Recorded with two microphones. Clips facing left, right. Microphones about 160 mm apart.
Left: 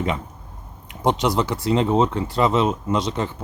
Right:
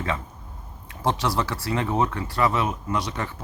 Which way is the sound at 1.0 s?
20° left (ahead or behind).